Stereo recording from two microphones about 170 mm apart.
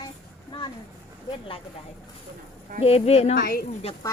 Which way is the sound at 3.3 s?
70° left (ahead or behind).